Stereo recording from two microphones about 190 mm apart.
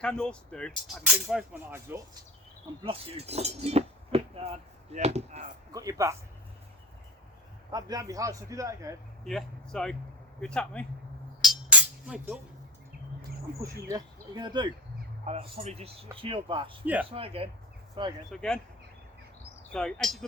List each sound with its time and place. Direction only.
0.0 s speech: 5° left (ahead or behind)
1.0 s a man's voice: 5° right (ahead or behind)
2.8 s speech: 30° right (ahead or behind)
5.7 s a man's voice: 15° right (ahead or behind)
7.7 s a man's voice: 20° right (ahead or behind)
9.2 s speech: 5° left (ahead or behind)
11.4 s music: 5° right (ahead or behind)
13.9 s speech: 20° right (ahead or behind)
15.3 s speech: 35° right (ahead or behind)
16.8 s a man's voice: 10° right (ahead or behind)
17.1 s speech: 30° right (ahead or behind)
18.3 s speech: 5° left (ahead or behind)
19.7 s speech: centre (ahead or behind)